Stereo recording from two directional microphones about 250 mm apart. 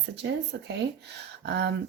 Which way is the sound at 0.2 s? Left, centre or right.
Right.